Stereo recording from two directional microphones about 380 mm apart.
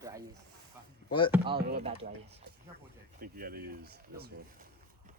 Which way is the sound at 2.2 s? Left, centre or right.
Right.